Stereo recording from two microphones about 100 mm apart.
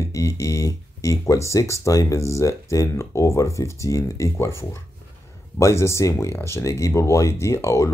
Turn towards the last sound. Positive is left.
turn(degrees=30)  # may be behind; listen again after turning